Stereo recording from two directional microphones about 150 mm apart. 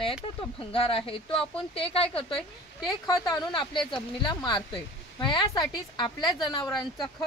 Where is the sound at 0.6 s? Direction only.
40° left (ahead or behind).